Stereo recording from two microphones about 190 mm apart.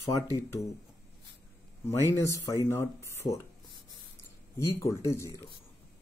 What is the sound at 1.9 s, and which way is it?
Speech, 15° left (ahead or behind).